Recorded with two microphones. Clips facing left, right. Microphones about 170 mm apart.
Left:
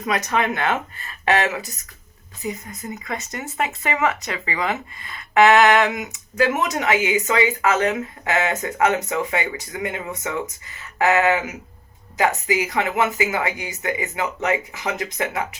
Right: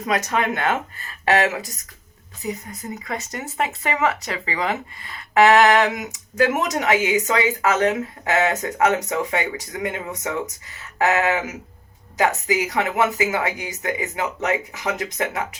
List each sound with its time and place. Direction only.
0.1 s speech: 40° right (ahead or behind)
2.5 s speech: 35° right (ahead or behind)